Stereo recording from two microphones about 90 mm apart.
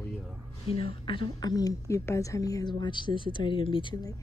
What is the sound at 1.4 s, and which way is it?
A woman's voice, 45° left (ahead or behind).